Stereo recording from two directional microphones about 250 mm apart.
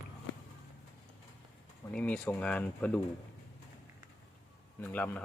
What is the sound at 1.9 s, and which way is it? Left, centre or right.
Speech, centre.